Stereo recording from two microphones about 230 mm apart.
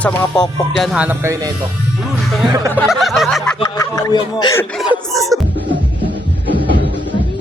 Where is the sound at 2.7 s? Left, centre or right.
Centre.